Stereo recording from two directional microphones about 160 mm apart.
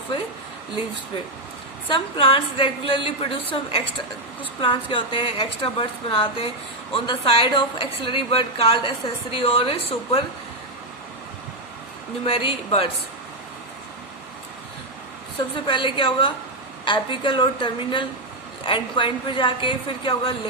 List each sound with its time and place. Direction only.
1.9 s a woman's voice: 35° left (ahead or behind)
12.2 s a woman's voice: 35° left (ahead or behind)
15.6 s a woman's voice: 30° left (ahead or behind)